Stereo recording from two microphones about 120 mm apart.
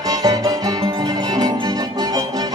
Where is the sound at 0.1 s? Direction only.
30° right (ahead or behind).